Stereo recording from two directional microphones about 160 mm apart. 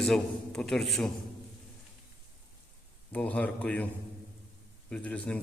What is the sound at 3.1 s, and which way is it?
Speech, 10° left (ahead or behind).